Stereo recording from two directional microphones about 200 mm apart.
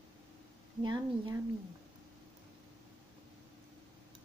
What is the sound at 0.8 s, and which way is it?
Speech, 20° right (ahead or behind).